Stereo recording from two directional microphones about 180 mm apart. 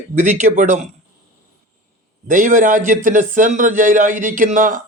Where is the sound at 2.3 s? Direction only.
45° right (ahead or behind).